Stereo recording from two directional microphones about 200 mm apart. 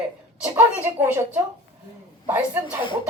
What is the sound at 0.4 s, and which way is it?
Speech, 10° right (ahead or behind).